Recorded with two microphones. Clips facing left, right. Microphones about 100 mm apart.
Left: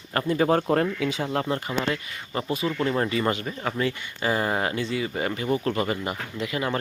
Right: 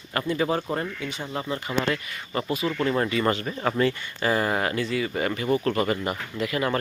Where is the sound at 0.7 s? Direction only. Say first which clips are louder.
Left 6 dB; 80° left.